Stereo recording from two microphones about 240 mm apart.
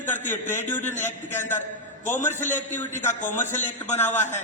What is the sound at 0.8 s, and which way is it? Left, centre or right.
Speech, left.